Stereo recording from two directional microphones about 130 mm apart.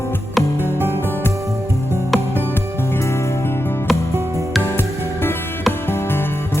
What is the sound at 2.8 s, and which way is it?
Music, 20° left (ahead or behind).